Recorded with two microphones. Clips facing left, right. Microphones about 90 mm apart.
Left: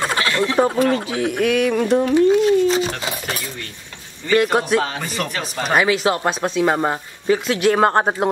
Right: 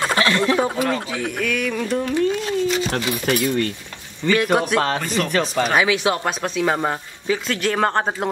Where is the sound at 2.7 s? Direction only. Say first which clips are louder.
Left 2 dB; 30° left (ahead or behind).